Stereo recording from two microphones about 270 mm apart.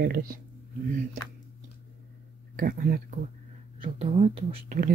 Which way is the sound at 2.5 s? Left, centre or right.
Right.